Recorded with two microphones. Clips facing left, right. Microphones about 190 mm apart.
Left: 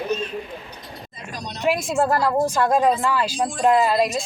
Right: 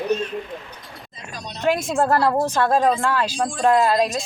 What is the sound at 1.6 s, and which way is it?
Speech, 10° left (ahead or behind).